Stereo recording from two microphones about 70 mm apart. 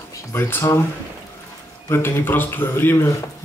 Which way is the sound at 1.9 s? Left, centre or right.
Left.